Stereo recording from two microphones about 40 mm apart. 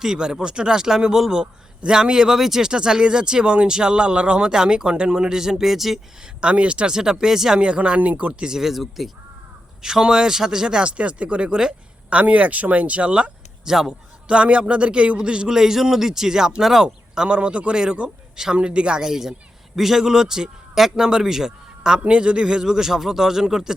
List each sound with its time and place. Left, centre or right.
0.0 s a man's voice: centre
6.2 s speech: right
6.9 s a man's voice: centre
7.6 s speech: right
8.4 s a man's voice: centre
9.8 s a man's voice: centre
10.8 s speech: right
13.7 s a man's voice: centre
14.3 s speech: right
15.5 s a man's voice: centre; by 17.7 s right
18.0 s a man's voice: centre
18.5 s speech: right
19.0 s a man's voice: centre